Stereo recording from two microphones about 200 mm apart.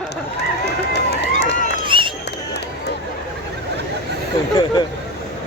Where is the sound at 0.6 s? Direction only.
55° left (ahead or behind).